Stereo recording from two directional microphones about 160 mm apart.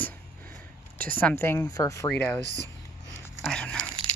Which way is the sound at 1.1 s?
15° left (ahead or behind).